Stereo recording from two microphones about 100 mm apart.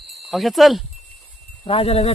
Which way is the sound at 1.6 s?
80° left.